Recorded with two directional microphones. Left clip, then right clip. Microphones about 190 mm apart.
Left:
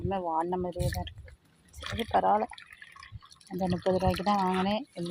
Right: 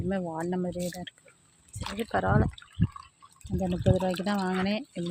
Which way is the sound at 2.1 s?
25° right (ahead or behind).